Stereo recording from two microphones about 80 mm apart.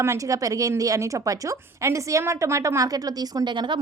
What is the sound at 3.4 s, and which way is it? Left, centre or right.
Speech, right.